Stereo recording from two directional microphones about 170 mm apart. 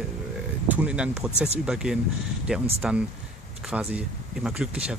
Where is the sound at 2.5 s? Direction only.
5° right (ahead or behind).